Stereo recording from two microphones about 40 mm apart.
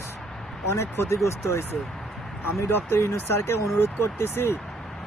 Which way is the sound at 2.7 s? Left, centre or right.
Left.